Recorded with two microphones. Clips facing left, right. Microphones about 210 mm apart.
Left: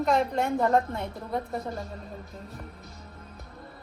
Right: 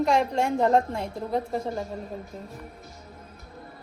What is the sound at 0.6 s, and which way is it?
Speech, 30° right (ahead or behind).